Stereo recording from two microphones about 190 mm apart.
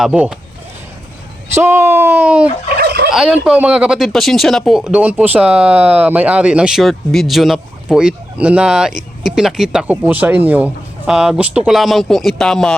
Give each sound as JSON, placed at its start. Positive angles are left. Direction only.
{"t": 0.0, "sound": "speech", "side_deg": -5}
{"t": 1.5, "sound": "speech", "side_deg": -15}
{"t": 2.7, "sound": "fowl", "side_deg": -55}
{"t": 3.1, "sound": "speech", "side_deg": 0}